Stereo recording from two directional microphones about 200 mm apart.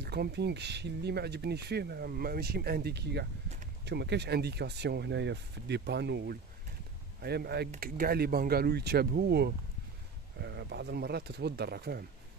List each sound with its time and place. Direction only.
0.0 s speech: 55° right (ahead or behind)